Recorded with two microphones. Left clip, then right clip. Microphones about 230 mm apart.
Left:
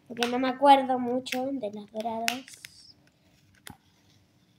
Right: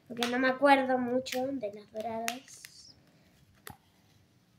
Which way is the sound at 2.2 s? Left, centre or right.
Centre.